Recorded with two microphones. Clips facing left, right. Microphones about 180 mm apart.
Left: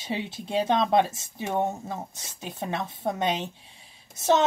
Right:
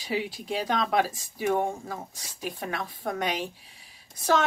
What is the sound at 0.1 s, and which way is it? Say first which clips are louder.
Speech: left 1 dB; 25° left (ahead or behind).